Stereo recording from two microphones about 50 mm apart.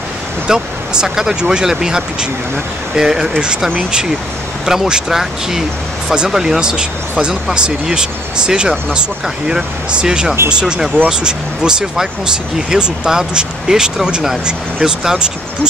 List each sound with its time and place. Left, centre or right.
0.5 s speech: centre
4.6 s speech: centre